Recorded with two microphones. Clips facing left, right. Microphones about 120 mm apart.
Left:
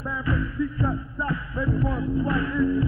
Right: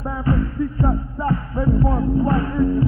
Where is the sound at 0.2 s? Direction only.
40° right (ahead or behind).